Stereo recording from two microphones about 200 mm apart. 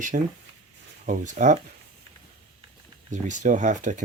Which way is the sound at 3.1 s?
40° right (ahead or behind).